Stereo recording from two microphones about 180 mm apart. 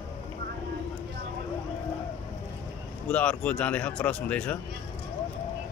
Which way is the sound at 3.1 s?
5° left (ahead or behind).